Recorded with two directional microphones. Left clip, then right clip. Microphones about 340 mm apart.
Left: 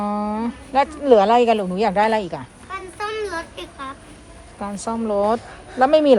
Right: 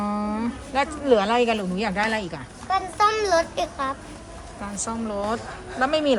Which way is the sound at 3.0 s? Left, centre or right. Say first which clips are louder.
Right 5 dB; right.